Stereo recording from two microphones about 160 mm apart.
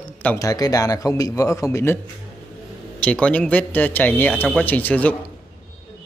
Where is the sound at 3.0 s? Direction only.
5° left (ahead or behind).